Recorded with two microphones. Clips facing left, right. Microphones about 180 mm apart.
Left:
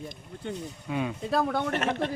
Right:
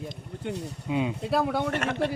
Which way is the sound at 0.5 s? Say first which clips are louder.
Right 2 dB; 70° right (ahead or behind).